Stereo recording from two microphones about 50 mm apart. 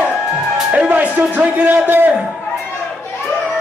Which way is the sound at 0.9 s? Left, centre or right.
Right.